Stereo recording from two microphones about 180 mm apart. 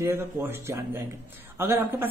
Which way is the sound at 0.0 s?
15° right (ahead or behind).